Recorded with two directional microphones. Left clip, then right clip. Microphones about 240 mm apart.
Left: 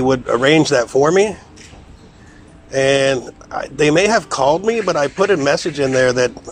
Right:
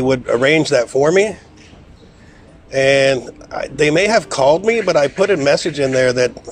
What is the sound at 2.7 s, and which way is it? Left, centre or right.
Speech, centre.